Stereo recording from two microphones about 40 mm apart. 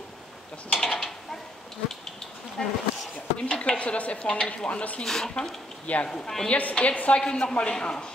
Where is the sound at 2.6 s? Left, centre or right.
Centre.